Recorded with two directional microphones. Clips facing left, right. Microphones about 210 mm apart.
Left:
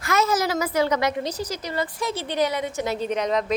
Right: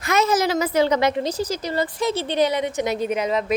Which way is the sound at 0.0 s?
20° right (ahead or behind).